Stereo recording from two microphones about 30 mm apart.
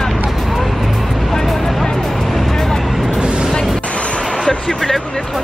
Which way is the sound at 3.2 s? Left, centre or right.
Right.